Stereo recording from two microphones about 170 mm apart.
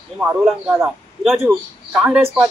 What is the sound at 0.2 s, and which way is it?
Speech, 10° right (ahead or behind).